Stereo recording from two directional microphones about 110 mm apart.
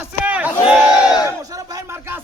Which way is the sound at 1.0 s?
35° left (ahead or behind).